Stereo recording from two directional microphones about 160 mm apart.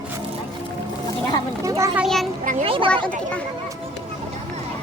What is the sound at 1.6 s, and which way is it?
Children playing, 20° right (ahead or behind).